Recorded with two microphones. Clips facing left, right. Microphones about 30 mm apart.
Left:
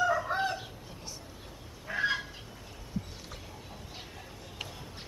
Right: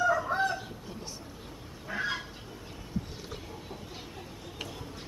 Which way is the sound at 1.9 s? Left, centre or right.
Centre.